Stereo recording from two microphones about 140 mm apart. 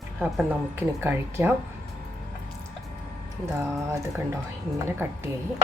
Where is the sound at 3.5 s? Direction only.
20° right (ahead or behind).